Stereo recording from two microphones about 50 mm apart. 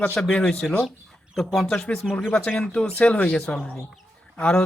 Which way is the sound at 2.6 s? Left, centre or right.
Centre.